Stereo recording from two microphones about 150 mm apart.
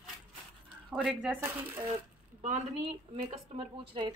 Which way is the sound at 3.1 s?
40° right (ahead or behind).